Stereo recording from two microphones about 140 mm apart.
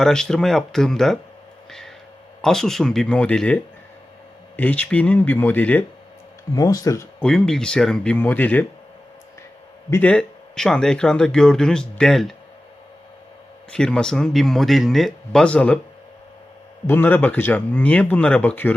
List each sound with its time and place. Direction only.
0.0 s a man's voice: 5° left (ahead or behind)
2.4 s a man's voice: 5° left (ahead or behind)
6.5 s speech: 25° left (ahead or behind)
7.2 s a man's voice: 5° left (ahead or behind)
9.9 s a man's voice: 10° left (ahead or behind)
13.7 s a man's voice: 5° left (ahead or behind)
16.8 s speech: 15° left (ahead or behind)